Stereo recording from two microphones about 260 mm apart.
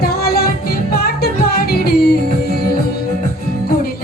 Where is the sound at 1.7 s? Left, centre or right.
Left.